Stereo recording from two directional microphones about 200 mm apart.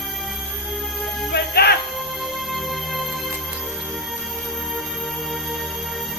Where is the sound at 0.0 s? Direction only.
Centre (ahead or behind).